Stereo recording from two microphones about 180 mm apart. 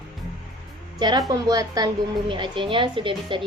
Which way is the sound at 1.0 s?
20° right (ahead or behind).